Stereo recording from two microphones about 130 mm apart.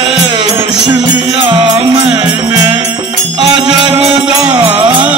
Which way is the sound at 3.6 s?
5° right (ahead or behind).